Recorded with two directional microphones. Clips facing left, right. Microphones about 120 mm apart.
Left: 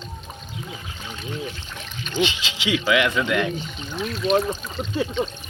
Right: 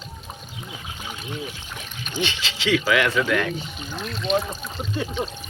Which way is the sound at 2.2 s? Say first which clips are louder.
Left 3 dB; 15° left (ahead or behind).